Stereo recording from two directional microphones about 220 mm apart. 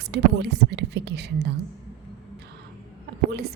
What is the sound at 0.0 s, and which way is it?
A woman's voice, 50° right (ahead or behind).